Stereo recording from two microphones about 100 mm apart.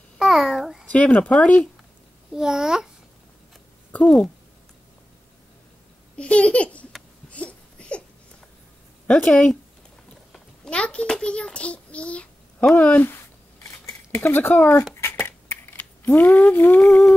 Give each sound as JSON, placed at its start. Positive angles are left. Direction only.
{"t": 0.2, "sound": "babbling", "side_deg": -5}
{"t": 0.9, "sound": "speech", "side_deg": 15}
{"t": 2.3, "sound": "a child's voice", "side_deg": -5}
{"t": 3.9, "sound": "speech", "side_deg": 10}
{"t": 6.1, "sound": "speech", "side_deg": 10}
{"t": 7.2, "sound": "a sound", "side_deg": 10}
{"t": 9.0, "sound": "a child's voice", "side_deg": 10}
{"t": 13.7, "sound": "scissors", "side_deg": 30}
{"t": 15.0, "sound": "a sound", "side_deg": 25}